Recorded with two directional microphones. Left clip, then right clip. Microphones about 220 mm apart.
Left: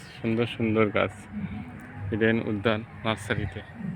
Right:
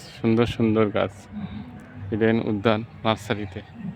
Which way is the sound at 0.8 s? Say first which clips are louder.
Even; 10° right (ahead or behind).